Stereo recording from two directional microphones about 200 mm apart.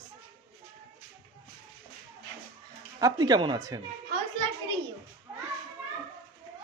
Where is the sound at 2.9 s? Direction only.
20° right (ahead or behind).